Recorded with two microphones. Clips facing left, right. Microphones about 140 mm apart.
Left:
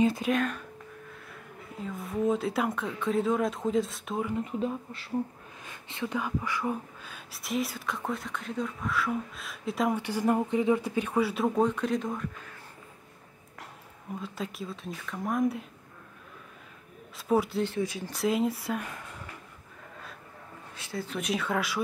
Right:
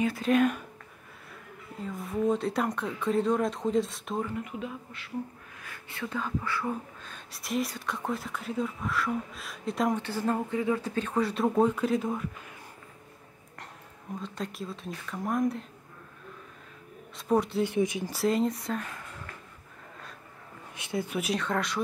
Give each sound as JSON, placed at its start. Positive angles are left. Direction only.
{"t": 0.3, "sound": "speech", "side_deg": -10}
{"t": 1.8, "sound": "speech", "side_deg": 0}
{"t": 4.3, "sound": "speech", "side_deg": 30}
{"t": 5.6, "sound": "speech", "side_deg": 20}
{"t": 7.3, "sound": "speech", "side_deg": 0}
{"t": 10.0, "sound": "speech", "side_deg": 15}
{"t": 14.2, "sound": "speech", "side_deg": 5}
{"t": 17.3, "sound": "speech", "side_deg": 0}
{"t": 17.6, "sound": "speech", "side_deg": -20}
{"t": 18.1, "sound": "speech", "side_deg": 0}
{"t": 20.7, "sound": "speech", "side_deg": -20}
{"t": 21.2, "sound": "speech", "side_deg": 0}